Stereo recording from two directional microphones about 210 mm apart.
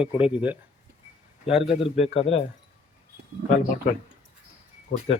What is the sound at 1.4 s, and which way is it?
Speech, 30° left (ahead or behind).